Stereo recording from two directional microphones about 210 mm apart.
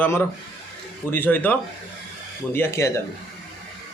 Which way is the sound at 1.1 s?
10° left (ahead or behind).